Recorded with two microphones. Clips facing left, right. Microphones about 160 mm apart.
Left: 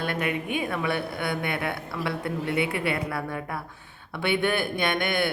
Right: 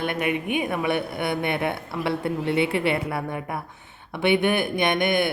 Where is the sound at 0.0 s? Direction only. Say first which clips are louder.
Right 3 dB; 20° right (ahead or behind).